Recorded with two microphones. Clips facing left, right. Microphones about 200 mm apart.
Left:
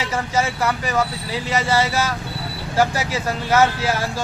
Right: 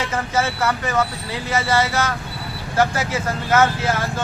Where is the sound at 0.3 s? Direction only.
15° left (ahead or behind).